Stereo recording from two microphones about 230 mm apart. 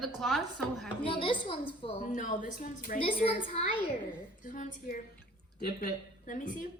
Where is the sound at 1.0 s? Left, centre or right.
Left.